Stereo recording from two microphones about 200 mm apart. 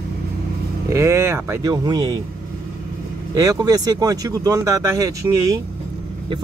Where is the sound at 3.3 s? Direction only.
20° right (ahead or behind).